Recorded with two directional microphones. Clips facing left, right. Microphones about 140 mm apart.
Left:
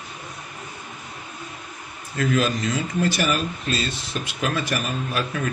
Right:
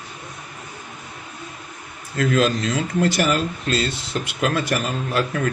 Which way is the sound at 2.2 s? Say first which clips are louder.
Right 3 dB; 65° right (ahead or behind).